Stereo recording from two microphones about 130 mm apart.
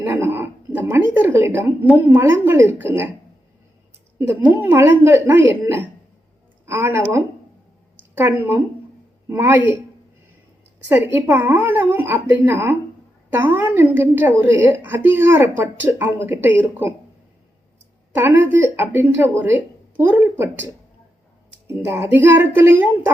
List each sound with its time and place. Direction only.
0.0 s a woman's voice: 15° right (ahead or behind)
4.2 s a woman's voice: 15° right (ahead or behind)
10.8 s a woman's voice: 15° right (ahead or behind)
18.1 s a woman's voice: 15° right (ahead or behind)
21.7 s a woman's voice: 20° right (ahead or behind)